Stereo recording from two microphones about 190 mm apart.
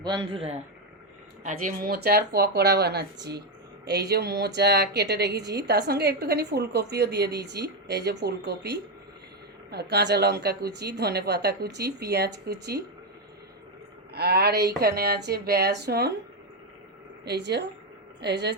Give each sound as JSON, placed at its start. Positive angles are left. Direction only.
{"t": 0.0, "sound": "a man's voice", "side_deg": -25}
{"t": 1.5, "sound": "a woman's voice", "side_deg": -45}
{"t": 14.1, "sound": "a woman's voice", "side_deg": -55}
{"t": 17.2, "sound": "a woman's voice", "side_deg": -60}